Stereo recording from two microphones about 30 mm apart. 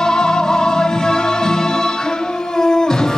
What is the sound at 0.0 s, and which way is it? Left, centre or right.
Music, left.